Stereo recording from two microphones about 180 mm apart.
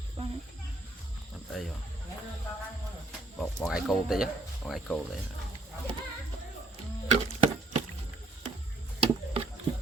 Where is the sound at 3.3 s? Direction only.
Centre (ahead or behind).